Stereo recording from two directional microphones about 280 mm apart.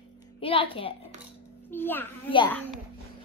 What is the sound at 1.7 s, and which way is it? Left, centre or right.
Speech, centre.